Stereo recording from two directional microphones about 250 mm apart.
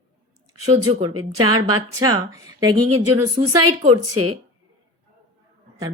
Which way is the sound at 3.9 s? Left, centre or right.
Right.